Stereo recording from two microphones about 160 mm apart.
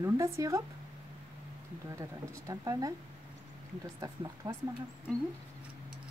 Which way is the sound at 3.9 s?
20° right (ahead or behind).